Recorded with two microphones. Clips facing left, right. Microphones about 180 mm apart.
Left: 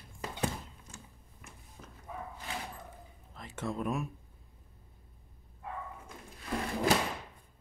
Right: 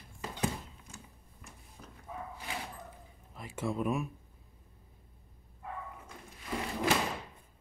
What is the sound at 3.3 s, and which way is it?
Speech, 10° right (ahead or behind).